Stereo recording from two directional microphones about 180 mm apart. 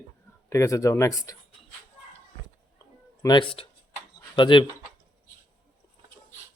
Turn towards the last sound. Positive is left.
turn(degrees=25)  # may be behind; listen again after turning